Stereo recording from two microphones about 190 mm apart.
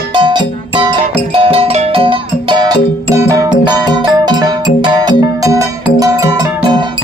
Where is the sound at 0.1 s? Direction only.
25° right (ahead or behind).